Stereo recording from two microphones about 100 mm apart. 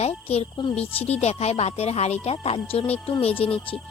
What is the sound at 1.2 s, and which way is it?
Speech, 90° left.